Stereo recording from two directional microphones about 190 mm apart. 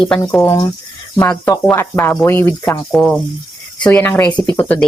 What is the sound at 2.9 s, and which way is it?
Speech, centre (ahead or behind).